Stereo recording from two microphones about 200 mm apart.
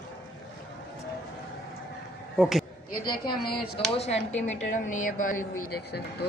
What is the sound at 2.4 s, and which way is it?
Speech, centre (ahead or behind).